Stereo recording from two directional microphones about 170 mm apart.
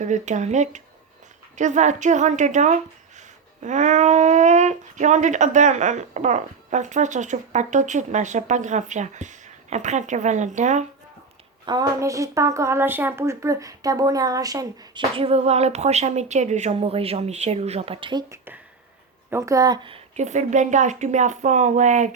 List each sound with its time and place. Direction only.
0.0 s a woman's voice: 45° right (ahead or behind)
11.6 s speech: 25° right (ahead or behind)
15.1 s speech: 35° right (ahead or behind)
20.1 s a woman's voice: 45° right (ahead or behind)